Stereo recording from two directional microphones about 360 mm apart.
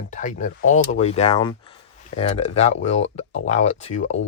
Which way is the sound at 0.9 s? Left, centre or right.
Centre.